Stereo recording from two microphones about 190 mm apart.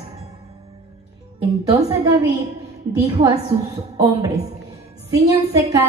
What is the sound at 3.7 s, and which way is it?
Speech, 15° right (ahead or behind).